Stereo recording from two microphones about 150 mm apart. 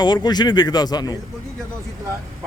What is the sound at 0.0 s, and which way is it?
A man's voice, 30° left (ahead or behind).